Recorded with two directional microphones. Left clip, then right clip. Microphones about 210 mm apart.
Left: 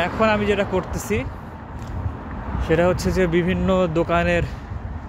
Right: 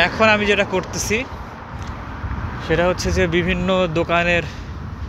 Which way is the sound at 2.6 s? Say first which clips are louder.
Right 1 dB; 20° left (ahead or behind).